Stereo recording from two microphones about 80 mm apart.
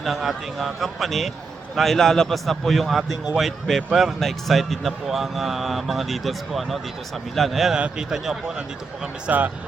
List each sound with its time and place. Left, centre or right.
0.0 s a man's voice: centre
9.2 s a man's voice: centre